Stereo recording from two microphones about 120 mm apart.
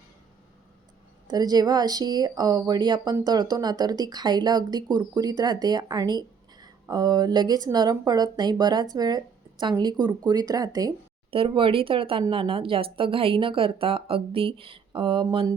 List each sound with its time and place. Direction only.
1.3 s speech: 35° right (ahead or behind)
11.3 s speech: 50° right (ahead or behind)